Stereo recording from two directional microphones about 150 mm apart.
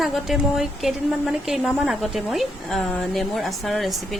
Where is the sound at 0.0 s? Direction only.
Centre (ahead or behind).